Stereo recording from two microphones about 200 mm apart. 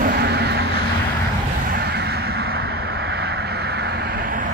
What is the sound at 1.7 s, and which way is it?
Vehicle, 55° right (ahead or behind).